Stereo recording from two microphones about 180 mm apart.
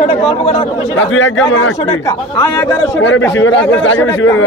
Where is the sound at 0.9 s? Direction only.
90° left.